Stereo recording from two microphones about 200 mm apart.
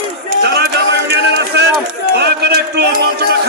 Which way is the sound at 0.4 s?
50° right (ahead or behind).